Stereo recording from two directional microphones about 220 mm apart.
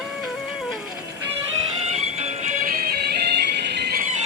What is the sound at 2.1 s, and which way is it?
Music, 30° right (ahead or behind).